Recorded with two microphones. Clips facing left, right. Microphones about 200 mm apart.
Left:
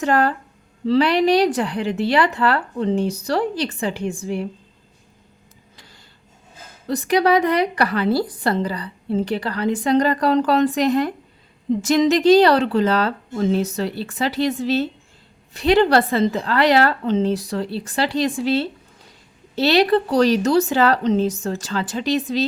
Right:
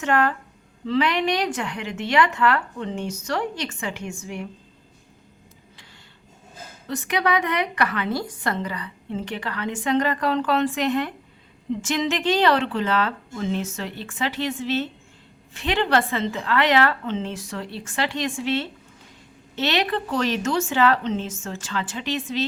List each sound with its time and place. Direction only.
0.0 s speech: 35° left (ahead or behind)
6.8 s speech: 35° left (ahead or behind)